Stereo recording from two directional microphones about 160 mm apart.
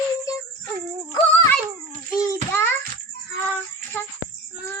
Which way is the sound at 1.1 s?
35° left (ahead or behind).